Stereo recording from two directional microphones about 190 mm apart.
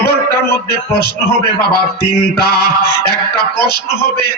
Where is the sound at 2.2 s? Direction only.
55° left (ahead or behind).